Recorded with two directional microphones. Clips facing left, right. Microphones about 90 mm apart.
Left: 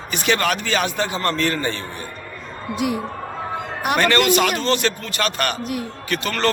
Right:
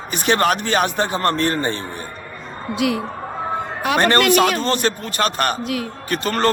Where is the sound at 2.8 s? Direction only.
90° right.